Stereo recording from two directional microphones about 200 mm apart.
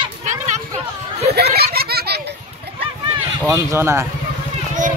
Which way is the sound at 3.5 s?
15° right (ahead or behind).